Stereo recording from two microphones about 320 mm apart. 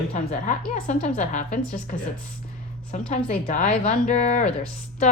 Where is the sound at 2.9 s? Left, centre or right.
Left.